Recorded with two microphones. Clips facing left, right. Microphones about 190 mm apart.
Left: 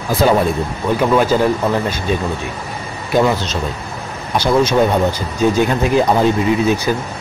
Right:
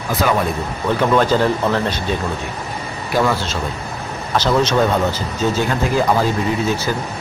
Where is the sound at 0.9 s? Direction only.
10° left (ahead or behind).